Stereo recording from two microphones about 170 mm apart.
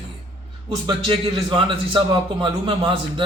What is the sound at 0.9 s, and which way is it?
A man's voice, 30° right (ahead or behind).